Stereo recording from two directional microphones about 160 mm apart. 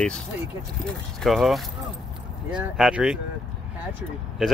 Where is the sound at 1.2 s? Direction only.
Centre (ahead or behind).